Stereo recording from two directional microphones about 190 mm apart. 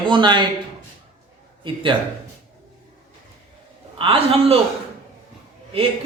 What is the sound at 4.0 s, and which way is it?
Speech, 30° right (ahead or behind).